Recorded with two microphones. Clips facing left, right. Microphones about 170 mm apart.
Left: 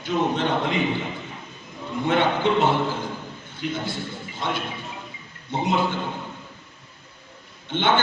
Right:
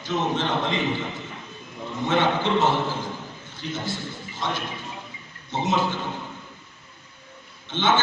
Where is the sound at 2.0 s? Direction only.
55° left (ahead or behind).